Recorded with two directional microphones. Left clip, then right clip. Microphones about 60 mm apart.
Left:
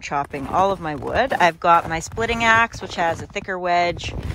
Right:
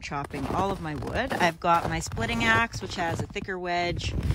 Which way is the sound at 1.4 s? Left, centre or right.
Right.